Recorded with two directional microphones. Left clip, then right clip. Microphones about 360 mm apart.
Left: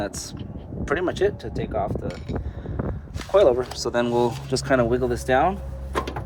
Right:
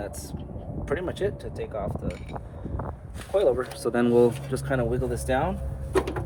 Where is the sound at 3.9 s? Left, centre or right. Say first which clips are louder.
Right 2 dB; centre.